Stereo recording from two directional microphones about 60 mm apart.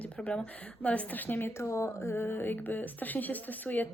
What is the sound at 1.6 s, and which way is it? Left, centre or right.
Speech, left.